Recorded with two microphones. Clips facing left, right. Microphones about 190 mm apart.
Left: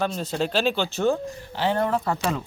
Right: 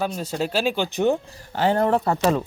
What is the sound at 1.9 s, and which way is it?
Speech, 30° right (ahead or behind).